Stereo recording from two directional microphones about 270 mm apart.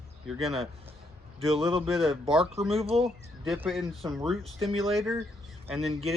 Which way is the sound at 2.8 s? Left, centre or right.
Right.